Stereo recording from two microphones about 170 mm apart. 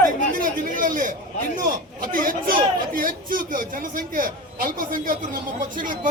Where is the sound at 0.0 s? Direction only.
50° right (ahead or behind).